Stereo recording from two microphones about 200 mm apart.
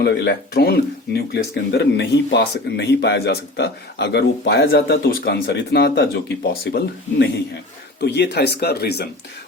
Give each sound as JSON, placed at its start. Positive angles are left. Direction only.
{"t": 0.0, "sound": "speech", "side_deg": 55}